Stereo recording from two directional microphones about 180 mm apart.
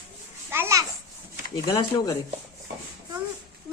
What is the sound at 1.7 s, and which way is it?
Speech, 20° left (ahead or behind).